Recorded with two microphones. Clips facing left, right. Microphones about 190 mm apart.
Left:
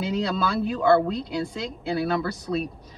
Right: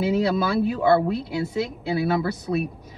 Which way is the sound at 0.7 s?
10° right (ahead or behind).